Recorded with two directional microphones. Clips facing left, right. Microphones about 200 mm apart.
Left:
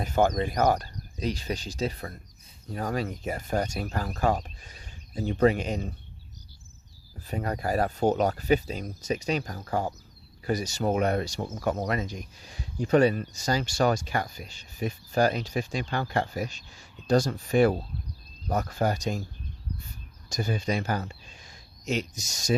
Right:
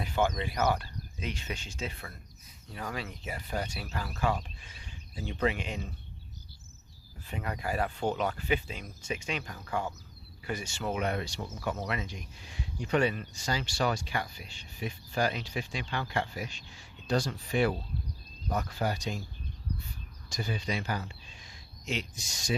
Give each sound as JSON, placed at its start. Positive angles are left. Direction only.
{"t": 0.0, "sound": "speech", "side_deg": 45}
{"t": 7.3, "sound": "speech", "side_deg": 40}
{"t": 20.3, "sound": "speech", "side_deg": 45}